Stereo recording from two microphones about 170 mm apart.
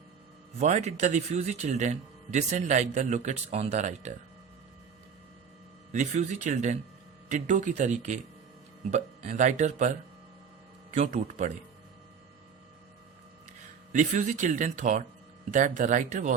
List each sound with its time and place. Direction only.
0.6 s speech: 40° right (ahead or behind)
5.9 s speech: 45° right (ahead or behind)
13.9 s speech: 50° right (ahead or behind)